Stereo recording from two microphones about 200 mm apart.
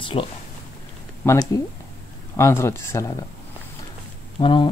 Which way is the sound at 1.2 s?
15° left (ahead or behind).